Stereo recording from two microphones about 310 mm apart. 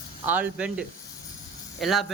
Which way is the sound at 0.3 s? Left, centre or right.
Centre.